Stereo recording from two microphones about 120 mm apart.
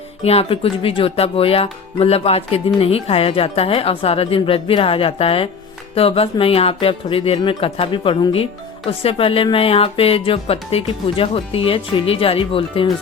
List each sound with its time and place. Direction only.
0.3 s speech: 55° left (ahead or behind)